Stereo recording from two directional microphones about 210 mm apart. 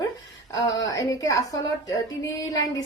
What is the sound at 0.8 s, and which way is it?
Speech, 15° left (ahead or behind).